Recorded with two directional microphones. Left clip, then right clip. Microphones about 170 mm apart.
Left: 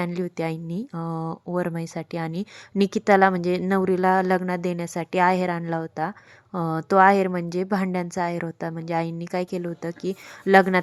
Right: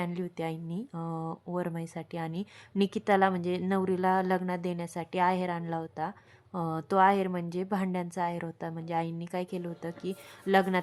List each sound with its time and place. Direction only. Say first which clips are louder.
0.0 s a woman's voice: left 7 dB; 30° left (ahead or behind)